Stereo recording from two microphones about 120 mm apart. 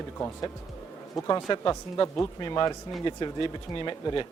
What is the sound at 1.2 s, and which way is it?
Speech, 30° left (ahead or behind).